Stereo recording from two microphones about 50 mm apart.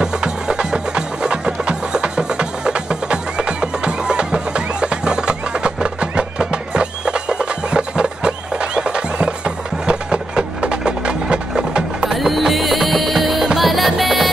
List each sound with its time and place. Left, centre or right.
0.0 s music: centre
9.8 s a sound: right
12.2 s music: centre